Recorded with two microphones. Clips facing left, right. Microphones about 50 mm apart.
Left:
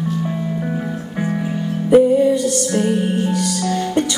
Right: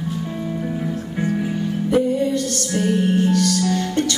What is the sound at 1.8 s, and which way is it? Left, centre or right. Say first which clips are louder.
Music: left 8 dB; centre.